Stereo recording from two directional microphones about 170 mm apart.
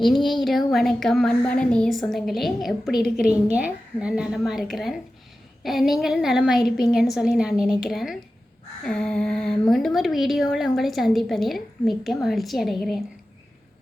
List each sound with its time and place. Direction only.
0.0 s a woman's voice: centre (ahead or behind)
2.9 s a woman's voice: 65° left (ahead or behind)
3.2 s a woman's voice: 5° right (ahead or behind)